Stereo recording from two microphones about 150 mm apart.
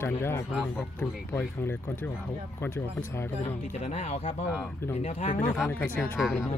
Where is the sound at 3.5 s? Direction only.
50° left (ahead or behind).